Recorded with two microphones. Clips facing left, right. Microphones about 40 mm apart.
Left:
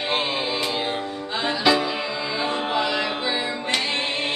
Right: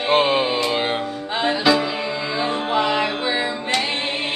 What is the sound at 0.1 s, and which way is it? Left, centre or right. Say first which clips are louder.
Music: right 9 dB; right.